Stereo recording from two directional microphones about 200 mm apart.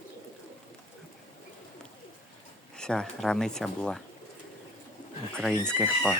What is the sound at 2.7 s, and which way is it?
Speech, 5° left (ahead or behind).